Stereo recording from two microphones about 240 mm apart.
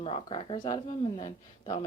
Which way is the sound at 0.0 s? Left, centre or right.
Left.